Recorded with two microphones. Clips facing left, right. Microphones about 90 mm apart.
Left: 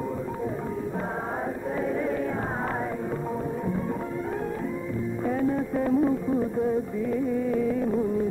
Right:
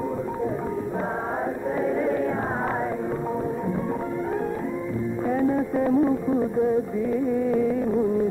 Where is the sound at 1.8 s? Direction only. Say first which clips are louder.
Right 4 dB; 30° right (ahead or behind).